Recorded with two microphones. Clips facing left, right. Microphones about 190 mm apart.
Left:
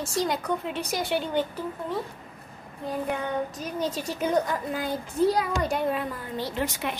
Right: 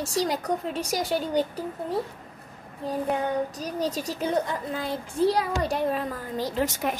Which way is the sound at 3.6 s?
35° right (ahead or behind).